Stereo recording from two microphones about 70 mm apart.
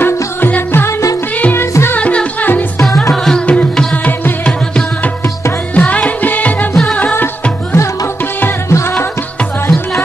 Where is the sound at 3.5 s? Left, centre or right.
Centre.